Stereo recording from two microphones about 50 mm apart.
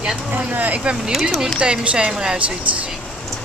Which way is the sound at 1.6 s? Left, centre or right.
Right.